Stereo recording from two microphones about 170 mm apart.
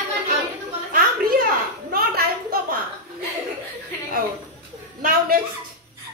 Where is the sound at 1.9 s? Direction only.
60° right (ahead or behind).